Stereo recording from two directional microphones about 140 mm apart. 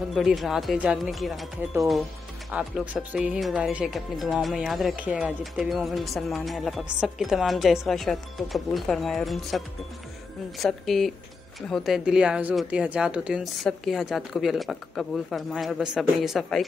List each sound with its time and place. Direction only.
0.1 s speech: centre (ahead or behind)
2.5 s speech: 10° right (ahead or behind)
10.6 s speech: centre (ahead or behind)